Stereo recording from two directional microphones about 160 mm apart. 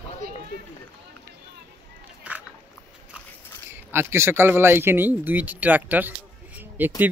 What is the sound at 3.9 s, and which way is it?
Speech, 15° right (ahead or behind).